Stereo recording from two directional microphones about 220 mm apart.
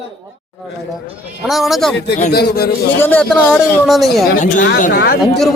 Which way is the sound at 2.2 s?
40° left (ahead or behind).